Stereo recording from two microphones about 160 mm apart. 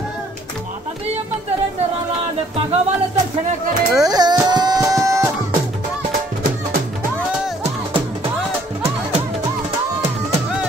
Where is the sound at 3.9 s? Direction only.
25° right (ahead or behind).